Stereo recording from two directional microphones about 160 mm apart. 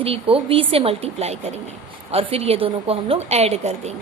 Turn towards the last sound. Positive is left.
turn(degrees=-40)  # may be behind; listen again after turning